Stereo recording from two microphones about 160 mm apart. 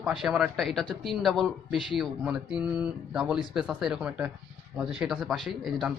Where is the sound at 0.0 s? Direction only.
Centre (ahead or behind).